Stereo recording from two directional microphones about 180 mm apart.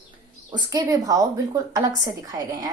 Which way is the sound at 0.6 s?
20° right (ahead or behind).